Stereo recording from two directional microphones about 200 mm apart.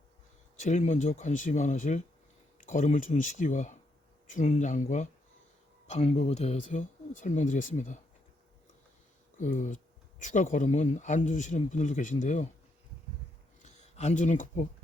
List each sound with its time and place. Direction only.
0.5 s speech: 35° left (ahead or behind)
9.4 s speech: 40° left (ahead or behind)
13.7 s speech: 35° left (ahead or behind)